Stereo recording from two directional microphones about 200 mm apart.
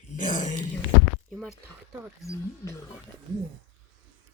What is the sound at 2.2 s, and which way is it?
Speech, 15° left (ahead or behind).